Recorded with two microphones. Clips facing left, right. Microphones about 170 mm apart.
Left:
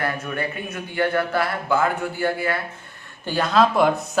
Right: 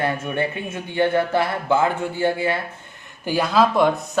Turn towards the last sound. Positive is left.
turn(degrees=0)  # may be behind; listen again after turning